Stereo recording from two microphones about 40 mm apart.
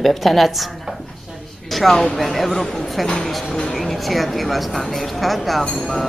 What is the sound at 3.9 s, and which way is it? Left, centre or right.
Speech, centre.